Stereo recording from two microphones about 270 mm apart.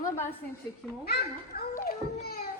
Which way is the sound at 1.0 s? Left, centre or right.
Left.